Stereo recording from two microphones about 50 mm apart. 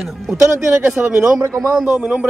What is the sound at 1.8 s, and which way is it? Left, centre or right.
Speech, right.